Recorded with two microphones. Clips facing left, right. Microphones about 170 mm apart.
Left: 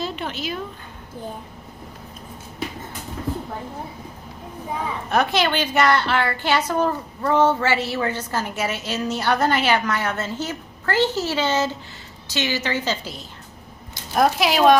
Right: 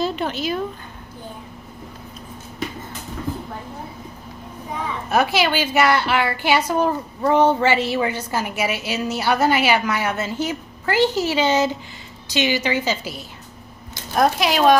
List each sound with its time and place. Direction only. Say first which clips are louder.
0.0 s a sound: right 5 dB; 40° right (ahead or behind)
5.1 s a woman's voice: right 1 dB; 5° right (ahead or behind)
14.1 s speech: even; centre (ahead or behind)